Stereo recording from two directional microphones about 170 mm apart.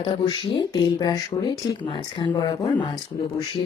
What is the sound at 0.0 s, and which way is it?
Speech, 25° left (ahead or behind).